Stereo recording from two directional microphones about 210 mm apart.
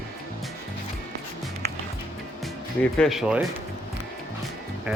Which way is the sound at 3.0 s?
Centre (ahead or behind).